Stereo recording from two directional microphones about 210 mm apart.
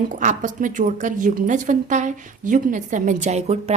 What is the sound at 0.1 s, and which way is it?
A woman's voice, 35° right (ahead or behind).